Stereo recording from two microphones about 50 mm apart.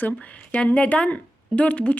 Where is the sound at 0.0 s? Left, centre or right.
Left.